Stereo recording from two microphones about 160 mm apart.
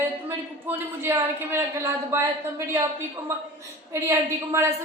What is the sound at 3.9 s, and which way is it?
Speech, 15° right (ahead or behind).